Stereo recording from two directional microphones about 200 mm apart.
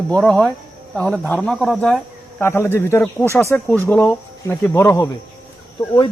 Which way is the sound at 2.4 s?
10° left (ahead or behind).